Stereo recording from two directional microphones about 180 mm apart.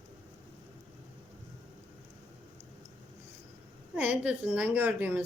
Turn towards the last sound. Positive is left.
turn(degrees=-10)  # may be behind; listen again after turning